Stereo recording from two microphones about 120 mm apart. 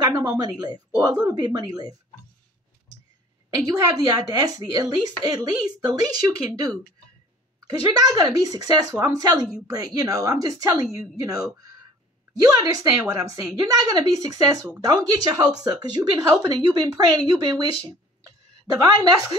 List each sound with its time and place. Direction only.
0.0 s a woman's voice: 35° right (ahead or behind)
3.4 s a woman's voice: 30° right (ahead or behind)
7.8 s a woman's voice: 35° right (ahead or behind)
18.7 s a woman's voice: 35° right (ahead or behind)